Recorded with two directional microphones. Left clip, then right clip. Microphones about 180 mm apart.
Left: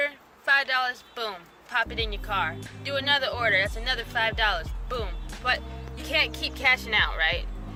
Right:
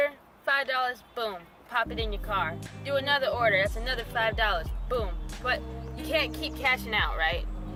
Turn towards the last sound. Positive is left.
turn(degrees=-20)  # may be behind; listen again after turning